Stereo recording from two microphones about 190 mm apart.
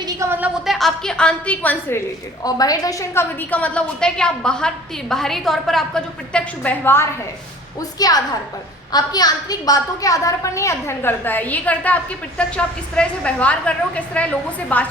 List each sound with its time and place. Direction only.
0.0 s a woman's voice: 15° right (ahead or behind); by 2.0 s 10° left (ahead or behind)
2.4 s a woman's voice: 20° left (ahead or behind)